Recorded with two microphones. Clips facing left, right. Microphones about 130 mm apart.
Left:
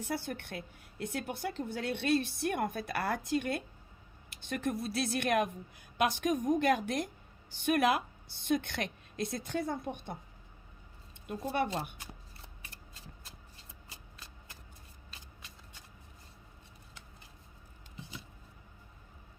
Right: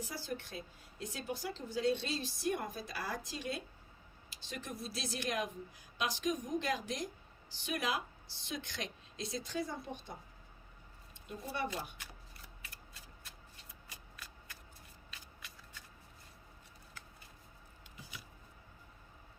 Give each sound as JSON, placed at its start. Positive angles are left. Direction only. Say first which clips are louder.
{"t": 0.0, "sound": "a woman's voice", "louder": "left 5 dB", "side_deg": 60}
{"t": 13.9, "sound": "shuffling cards", "louder": "right 1 dB", "side_deg": 25}
{"t": 17.9, "sound": "a sound", "louder": "left 5 dB", "side_deg": 25}